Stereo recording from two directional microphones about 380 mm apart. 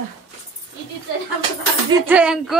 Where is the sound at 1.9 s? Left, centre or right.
Centre.